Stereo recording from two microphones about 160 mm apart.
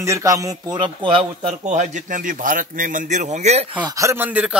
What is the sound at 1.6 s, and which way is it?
A man's voice, 50° right (ahead or behind).